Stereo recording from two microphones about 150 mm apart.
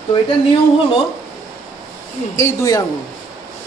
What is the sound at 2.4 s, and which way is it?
Speech, 25° left (ahead or behind).